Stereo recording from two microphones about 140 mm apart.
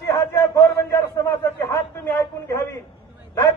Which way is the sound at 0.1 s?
20° left (ahead or behind).